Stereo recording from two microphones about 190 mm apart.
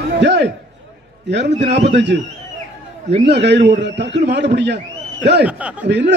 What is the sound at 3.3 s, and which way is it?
A man's voice, 65° right (ahead or behind).